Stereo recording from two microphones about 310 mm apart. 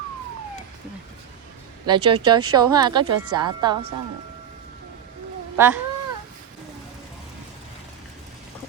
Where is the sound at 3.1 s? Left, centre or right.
Right.